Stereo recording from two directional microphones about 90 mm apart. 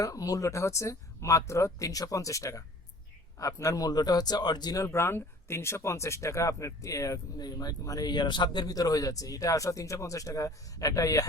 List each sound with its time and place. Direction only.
0.0 s a man's voice: 40° left (ahead or behind)
4.8 s speech: 30° left (ahead or behind)